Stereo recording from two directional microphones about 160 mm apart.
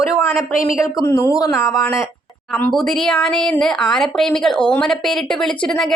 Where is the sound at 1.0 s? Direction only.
20° left (ahead or behind).